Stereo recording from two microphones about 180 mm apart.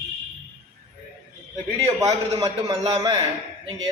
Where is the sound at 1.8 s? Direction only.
20° right (ahead or behind).